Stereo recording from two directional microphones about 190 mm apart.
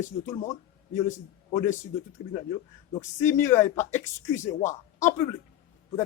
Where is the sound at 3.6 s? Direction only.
40° left (ahead or behind).